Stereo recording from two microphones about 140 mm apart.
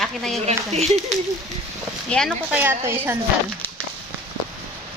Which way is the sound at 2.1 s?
5° left (ahead or behind).